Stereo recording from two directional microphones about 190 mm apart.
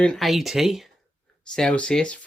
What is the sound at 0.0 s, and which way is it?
Speech, centre (ahead or behind).